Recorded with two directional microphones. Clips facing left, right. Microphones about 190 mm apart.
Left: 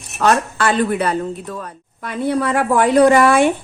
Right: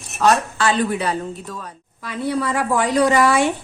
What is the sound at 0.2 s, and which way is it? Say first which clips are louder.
A woman's voice: left 1 dB; 55° left (ahead or behind).